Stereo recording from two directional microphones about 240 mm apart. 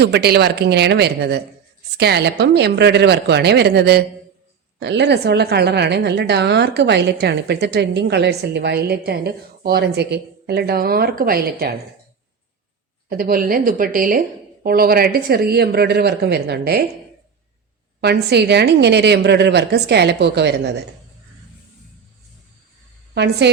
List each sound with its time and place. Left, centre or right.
0.0 s a woman's voice: right
13.1 s a woman's voice: right
18.0 s a woman's voice: right
23.1 s a woman's voice: right